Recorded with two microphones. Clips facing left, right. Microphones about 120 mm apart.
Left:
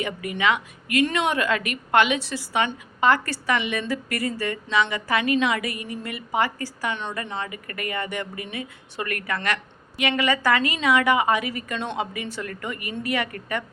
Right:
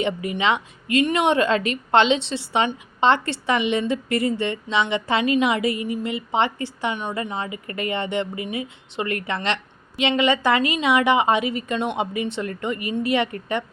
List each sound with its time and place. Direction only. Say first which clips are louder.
0.0 s a woman's voice: right 2 dB; 25° right (ahead or behind)